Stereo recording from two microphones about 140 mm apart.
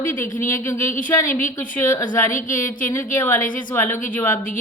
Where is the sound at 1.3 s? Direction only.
70° left (ahead or behind).